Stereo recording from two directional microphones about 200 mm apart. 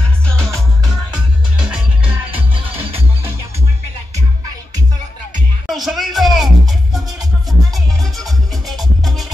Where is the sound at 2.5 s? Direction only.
25° right (ahead or behind).